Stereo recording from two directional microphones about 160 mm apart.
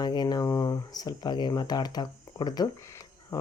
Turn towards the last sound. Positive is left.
turn(degrees=20)  # may be behind; listen again after turning